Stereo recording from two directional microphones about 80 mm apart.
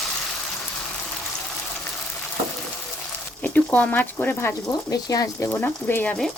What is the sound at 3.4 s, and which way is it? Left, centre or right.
Speech, centre.